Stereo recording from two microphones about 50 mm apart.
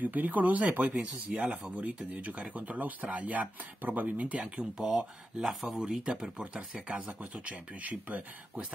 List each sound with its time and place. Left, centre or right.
0.0 s speech: right
4.7 s speech: centre
6.3 s speech: right
6.7 s speech: centre
7.4 s speech: right